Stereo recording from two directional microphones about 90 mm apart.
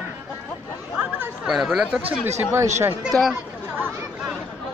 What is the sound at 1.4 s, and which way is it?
Speech, 5° right (ahead or behind).